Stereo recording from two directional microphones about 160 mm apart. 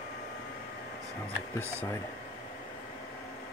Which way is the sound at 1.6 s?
15° right (ahead or behind).